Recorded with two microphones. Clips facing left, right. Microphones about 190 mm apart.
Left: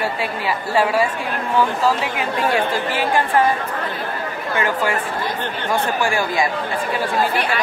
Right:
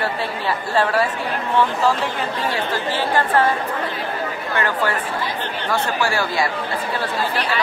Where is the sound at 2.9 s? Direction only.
10° left (ahead or behind).